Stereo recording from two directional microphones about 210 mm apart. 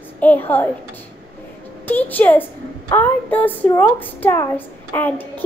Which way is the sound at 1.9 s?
10° left (ahead or behind).